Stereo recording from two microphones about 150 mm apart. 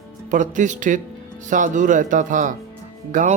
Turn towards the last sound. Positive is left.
turn(degrees=-60)  # may be behind; listen again after turning